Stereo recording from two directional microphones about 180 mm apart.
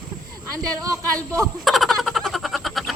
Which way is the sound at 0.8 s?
20° right (ahead or behind).